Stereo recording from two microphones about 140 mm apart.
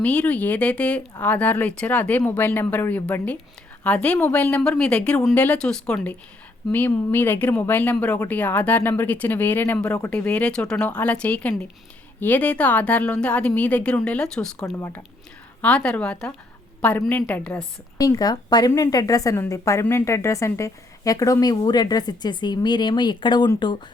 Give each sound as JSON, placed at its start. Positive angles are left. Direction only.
{"t": 0.0, "sound": "speech", "side_deg": 10}
{"t": 14.8, "sound": "speech", "side_deg": 20}
{"t": 17.9, "sound": "a woman's voice", "side_deg": 25}